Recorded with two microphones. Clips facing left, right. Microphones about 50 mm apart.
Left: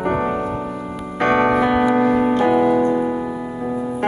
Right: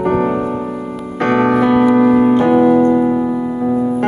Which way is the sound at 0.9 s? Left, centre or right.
Centre.